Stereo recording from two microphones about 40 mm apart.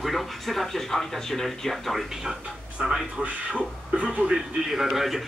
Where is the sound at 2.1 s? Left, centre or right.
Centre.